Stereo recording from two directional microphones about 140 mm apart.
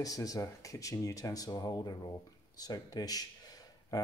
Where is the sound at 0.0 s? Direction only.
25° left (ahead or behind).